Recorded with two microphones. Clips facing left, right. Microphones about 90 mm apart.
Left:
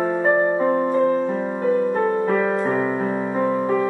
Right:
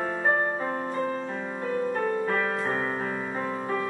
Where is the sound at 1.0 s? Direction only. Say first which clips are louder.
Left 11 dB; 10° left (ahead or behind).